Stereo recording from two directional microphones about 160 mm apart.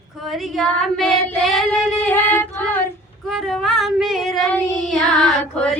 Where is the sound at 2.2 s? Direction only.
10° left (ahead or behind).